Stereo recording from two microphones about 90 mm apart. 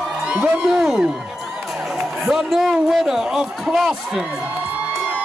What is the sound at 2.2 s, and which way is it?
A man's voice, centre (ahead or behind).